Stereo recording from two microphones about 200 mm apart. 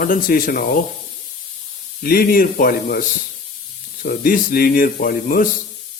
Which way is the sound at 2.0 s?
45° left (ahead or behind).